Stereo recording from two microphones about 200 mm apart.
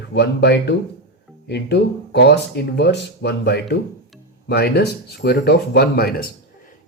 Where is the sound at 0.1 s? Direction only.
55° left (ahead or behind).